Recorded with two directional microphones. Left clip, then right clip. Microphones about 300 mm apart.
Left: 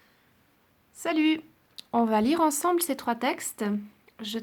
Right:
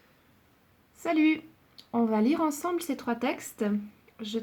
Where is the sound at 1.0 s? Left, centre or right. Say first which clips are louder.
Even; centre.